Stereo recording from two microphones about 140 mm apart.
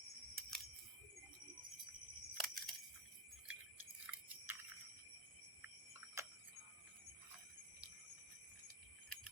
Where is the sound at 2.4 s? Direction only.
Centre (ahead or behind).